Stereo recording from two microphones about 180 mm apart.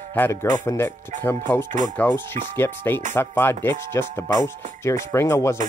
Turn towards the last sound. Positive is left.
turn(degrees=15)  # may be behind; listen again after turning